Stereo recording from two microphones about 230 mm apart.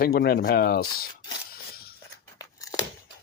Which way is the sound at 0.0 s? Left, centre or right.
Left.